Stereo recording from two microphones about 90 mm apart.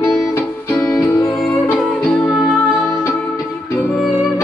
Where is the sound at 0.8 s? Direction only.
5° left (ahead or behind).